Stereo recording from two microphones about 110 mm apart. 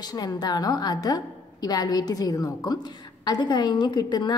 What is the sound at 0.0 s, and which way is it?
A woman's voice, 35° left (ahead or behind).